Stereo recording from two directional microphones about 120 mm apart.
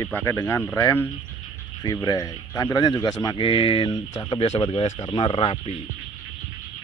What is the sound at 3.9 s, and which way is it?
Speech, 30° left (ahead or behind).